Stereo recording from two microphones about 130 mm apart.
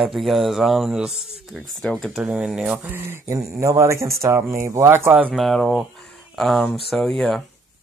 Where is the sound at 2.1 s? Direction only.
5° right (ahead or behind).